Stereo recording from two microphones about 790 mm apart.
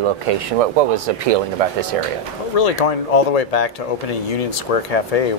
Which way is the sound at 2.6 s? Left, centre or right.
Left.